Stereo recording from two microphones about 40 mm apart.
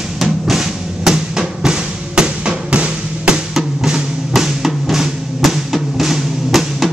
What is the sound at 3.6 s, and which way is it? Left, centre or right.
Music, centre.